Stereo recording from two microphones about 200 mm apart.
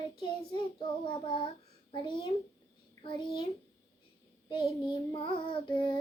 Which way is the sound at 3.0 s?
25° left (ahead or behind).